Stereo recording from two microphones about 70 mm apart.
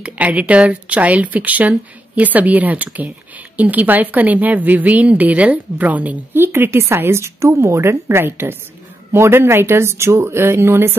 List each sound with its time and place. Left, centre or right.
0.0 s speech: right
6.3 s a woman's voice: right